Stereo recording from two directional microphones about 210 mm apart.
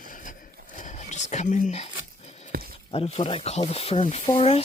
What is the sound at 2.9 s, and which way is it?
Speech, 30° left (ahead or behind).